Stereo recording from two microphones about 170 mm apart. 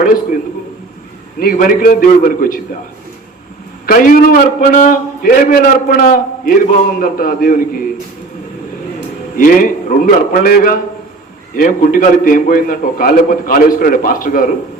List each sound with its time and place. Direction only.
1.4 s a man's voice: 55° left (ahead or behind)
3.8 s a man's voice: 55° left (ahead or behind)
9.3 s a man's voice: 55° left (ahead or behind)